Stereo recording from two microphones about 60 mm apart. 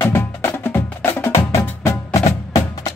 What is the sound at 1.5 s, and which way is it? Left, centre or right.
Music, left.